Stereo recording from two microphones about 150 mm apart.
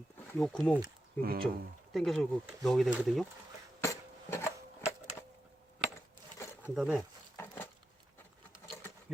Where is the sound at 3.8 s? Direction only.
20° left (ahead or behind).